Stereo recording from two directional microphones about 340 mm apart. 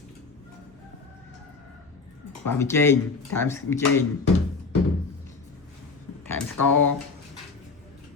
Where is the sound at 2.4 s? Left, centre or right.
Centre.